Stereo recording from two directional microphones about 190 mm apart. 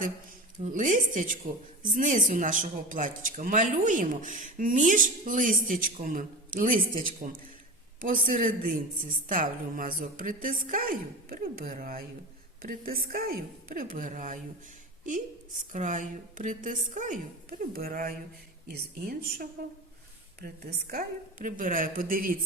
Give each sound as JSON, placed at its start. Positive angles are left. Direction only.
{"t": 0.6, "sound": "speech", "side_deg": -40}
{"t": 15.7, "sound": "a woman's voice", "side_deg": -40}